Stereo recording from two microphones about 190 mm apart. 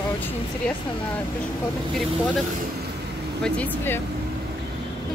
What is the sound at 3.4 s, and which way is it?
Speech, 10° left (ahead or behind).